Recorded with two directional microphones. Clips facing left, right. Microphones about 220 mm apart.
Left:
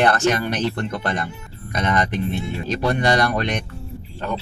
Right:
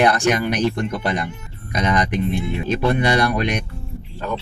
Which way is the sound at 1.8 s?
15° right (ahead or behind).